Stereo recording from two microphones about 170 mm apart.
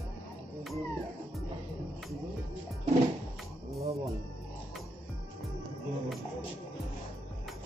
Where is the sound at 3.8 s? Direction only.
40° right (ahead or behind).